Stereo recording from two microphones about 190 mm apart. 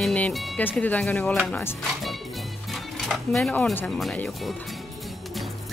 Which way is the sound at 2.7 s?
Centre (ahead or behind).